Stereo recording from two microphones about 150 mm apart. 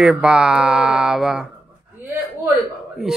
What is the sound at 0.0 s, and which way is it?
Speech, 5° right (ahead or behind).